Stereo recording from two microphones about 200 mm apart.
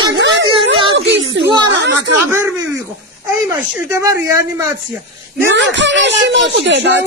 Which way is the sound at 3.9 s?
15° right (ahead or behind).